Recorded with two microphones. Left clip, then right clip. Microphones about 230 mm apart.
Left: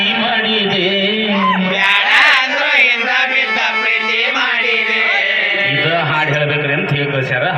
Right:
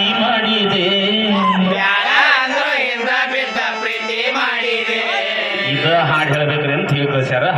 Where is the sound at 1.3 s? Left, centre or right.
Right.